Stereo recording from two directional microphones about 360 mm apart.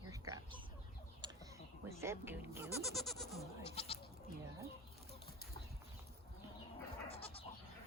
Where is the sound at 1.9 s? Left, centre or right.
Centre.